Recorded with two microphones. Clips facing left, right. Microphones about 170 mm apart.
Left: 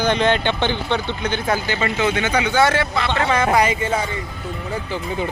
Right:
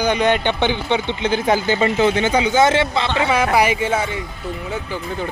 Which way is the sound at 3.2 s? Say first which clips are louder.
Even; 10° right (ahead or behind).